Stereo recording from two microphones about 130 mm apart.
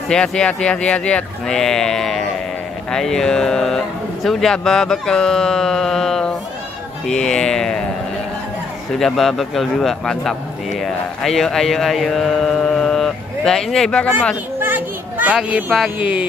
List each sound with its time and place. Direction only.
0.1 s speech: 5° left (ahead or behind)
8.9 s a man's voice: 5° left (ahead or behind)
14.6 s a child's voice: 15° right (ahead or behind)